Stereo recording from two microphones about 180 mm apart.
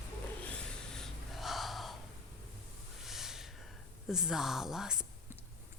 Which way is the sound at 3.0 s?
Centre (ahead or behind).